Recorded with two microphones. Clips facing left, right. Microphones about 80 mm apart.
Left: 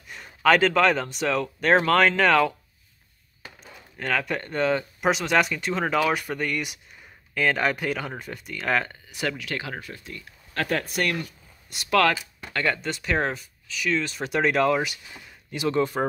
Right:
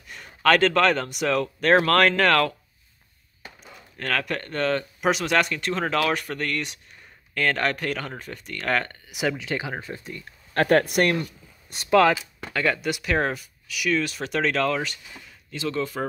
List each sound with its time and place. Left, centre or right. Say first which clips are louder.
0.1 s speech: even; centre
3.6 s speech: left 1 dB; centre
9.1 s speech: right 3 dB; centre
10.2 s speech: right 7 dB; right
11.9 s speech: right 3 dB; centre
12.5 s speech: right 2 dB; centre; by 16.1 s left